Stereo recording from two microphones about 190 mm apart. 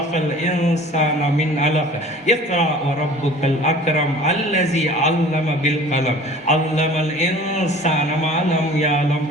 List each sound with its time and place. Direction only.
0.1 s speech: 35° left (ahead or behind)